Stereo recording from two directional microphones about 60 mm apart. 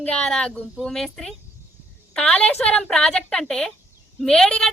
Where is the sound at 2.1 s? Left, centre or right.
Left.